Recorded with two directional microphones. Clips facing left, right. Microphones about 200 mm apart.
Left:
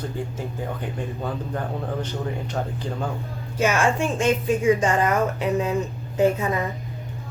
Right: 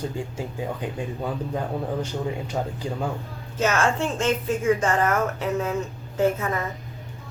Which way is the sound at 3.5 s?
10° left (ahead or behind).